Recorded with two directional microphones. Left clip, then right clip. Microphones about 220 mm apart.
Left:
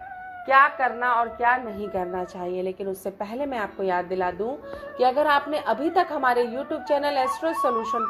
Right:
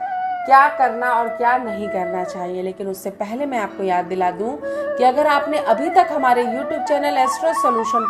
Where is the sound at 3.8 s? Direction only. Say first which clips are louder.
Right 6 dB; 15° left (ahead or behind).